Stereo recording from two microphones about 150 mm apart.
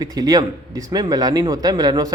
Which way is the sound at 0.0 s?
25° right (ahead or behind).